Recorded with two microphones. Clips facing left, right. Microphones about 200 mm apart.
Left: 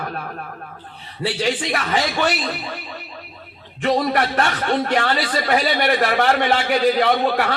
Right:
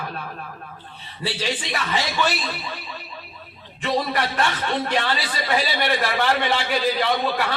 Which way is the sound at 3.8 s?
55° left (ahead or behind).